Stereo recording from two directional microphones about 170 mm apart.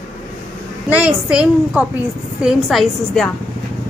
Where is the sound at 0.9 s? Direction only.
5° right (ahead or behind).